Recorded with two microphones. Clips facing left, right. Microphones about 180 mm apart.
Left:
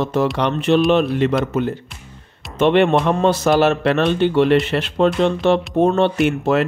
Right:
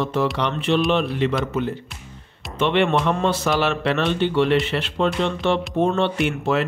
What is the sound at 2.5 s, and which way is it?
Speech, 45° left (ahead or behind).